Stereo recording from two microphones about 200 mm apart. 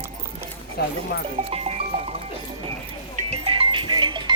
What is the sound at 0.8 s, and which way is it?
Speech, 50° left (ahead or behind).